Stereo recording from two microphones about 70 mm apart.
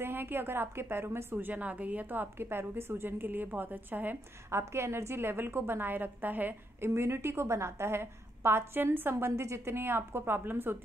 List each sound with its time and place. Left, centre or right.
0.0 s a woman's voice: right
4.5 s a woman's voice: right
6.9 s a woman's voice: right
9.2 s a woman's voice: right